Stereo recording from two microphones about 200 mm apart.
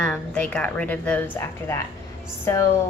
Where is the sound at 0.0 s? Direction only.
5° left (ahead or behind).